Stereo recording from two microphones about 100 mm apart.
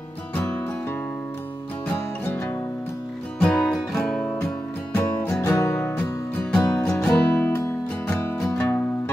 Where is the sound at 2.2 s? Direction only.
25° left (ahead or behind).